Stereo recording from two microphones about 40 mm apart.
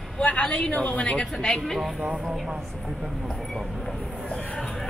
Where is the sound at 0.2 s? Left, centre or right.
Left.